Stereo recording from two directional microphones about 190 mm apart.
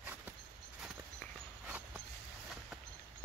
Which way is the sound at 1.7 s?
5° right (ahead or behind).